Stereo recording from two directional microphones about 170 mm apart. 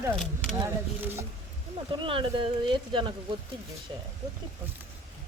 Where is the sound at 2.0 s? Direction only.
30° right (ahead or behind).